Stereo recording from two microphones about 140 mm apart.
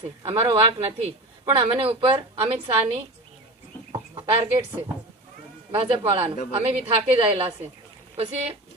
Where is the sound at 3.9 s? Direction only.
35° right (ahead or behind).